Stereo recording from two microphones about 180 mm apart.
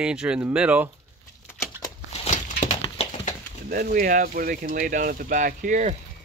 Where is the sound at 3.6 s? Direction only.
55° right (ahead or behind).